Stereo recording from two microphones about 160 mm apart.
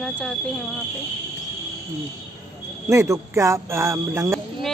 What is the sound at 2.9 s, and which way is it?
Speech, 20° right (ahead or behind).